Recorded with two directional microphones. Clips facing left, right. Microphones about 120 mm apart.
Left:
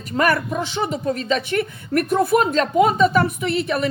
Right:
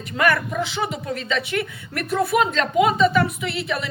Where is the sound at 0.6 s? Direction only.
40° left (ahead or behind).